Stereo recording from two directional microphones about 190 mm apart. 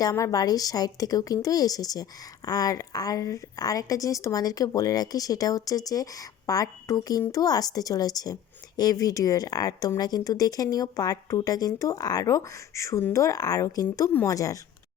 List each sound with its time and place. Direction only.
0.0 s a woman's voice: 20° left (ahead or behind)